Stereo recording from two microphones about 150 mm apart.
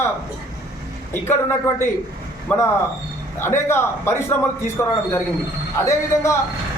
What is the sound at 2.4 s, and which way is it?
A man's voice, 15° left (ahead or behind).